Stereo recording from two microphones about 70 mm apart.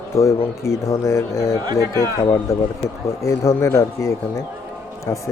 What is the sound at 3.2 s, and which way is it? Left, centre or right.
Speech, left.